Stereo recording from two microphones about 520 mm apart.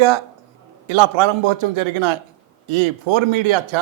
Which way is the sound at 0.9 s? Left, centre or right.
Right.